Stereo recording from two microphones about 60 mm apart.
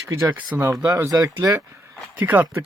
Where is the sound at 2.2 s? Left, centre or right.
Right.